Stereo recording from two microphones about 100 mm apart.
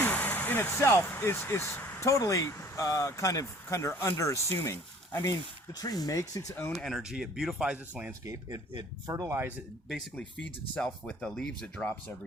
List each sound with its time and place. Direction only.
0.0 s speech: 15° left (ahead or behind)
2.0 s speech: 30° left (ahead or behind)
5.7 s speech: 40° left (ahead or behind)
6.7 s speech: centre (ahead or behind)
8.2 s speech: 35° right (ahead or behind)
8.7 s speech: 45° right (ahead or behind)
10.8 s speech: 10° left (ahead or behind)